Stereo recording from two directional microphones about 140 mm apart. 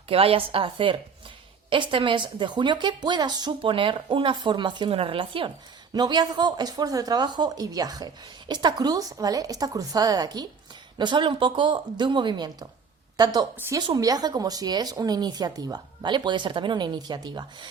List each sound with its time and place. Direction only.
0.1 s a woman's voice: 45° right (ahead or behind)